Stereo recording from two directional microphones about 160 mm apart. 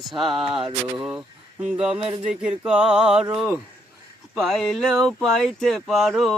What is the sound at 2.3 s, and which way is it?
Speech, 5° right (ahead or behind).